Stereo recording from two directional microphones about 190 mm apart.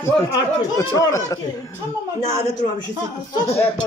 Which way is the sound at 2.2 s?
40° left (ahead or behind).